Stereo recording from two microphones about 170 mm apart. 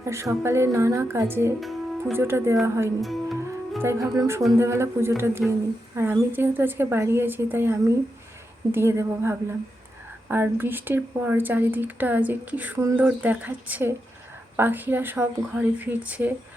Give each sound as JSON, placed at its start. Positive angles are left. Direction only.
{"t": 0.0, "sound": "speech", "side_deg": -15}
{"t": 1.6, "sound": "music", "side_deg": 0}
{"t": 2.1, "sound": "speech", "side_deg": -15}
{"t": 3.0, "sound": "speech", "side_deg": 0}
{"t": 3.8, "sound": "speech", "side_deg": -20}